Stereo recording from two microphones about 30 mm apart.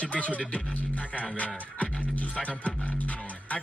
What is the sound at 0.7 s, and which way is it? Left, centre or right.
Speech, left.